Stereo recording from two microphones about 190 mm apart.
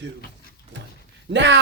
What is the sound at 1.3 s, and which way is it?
Speech, 70° right (ahead or behind).